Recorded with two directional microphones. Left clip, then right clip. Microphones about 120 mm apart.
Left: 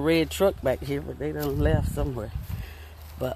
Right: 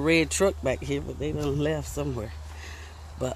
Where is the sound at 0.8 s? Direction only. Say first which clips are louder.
Even; 90° left.